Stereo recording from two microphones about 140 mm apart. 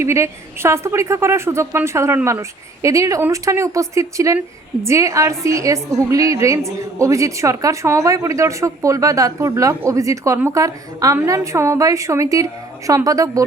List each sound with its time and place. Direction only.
0.0 s a woman's voice: 20° right (ahead or behind)